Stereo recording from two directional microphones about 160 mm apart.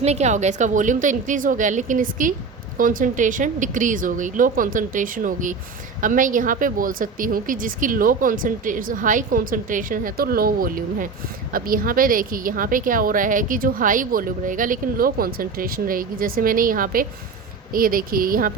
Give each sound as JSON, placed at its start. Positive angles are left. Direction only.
{"t": 0.0, "sound": "a woman's voice", "side_deg": -45}